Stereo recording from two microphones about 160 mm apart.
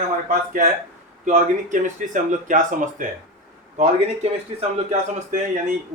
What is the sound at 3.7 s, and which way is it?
Speech, 45° right (ahead or behind).